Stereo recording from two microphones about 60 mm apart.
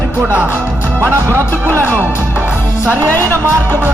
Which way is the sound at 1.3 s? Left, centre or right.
Right.